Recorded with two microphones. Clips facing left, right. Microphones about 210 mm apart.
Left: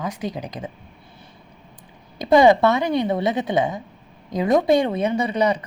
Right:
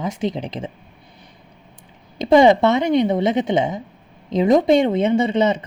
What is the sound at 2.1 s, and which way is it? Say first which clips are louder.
A woman's voice: right 2 dB; 25° right (ahead or behind).